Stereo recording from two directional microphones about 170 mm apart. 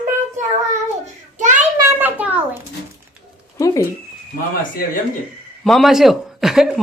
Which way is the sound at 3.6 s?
20° left (ahead or behind).